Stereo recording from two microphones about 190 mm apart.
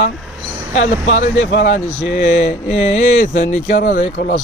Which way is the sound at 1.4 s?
65° left (ahead or behind).